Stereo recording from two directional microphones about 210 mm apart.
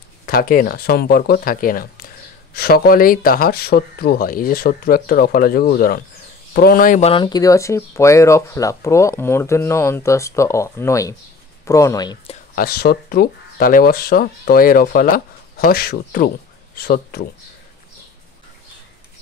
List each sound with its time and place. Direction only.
0.3 s speech: 45° left (ahead or behind); by 12.4 s 20° left (ahead or behind)
12.5 s speech: 45° left (ahead or behind)